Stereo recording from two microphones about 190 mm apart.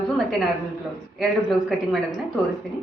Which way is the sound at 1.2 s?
Centre (ahead or behind).